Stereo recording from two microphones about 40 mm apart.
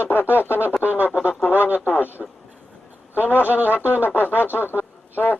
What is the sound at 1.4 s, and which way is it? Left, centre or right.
Radio, left.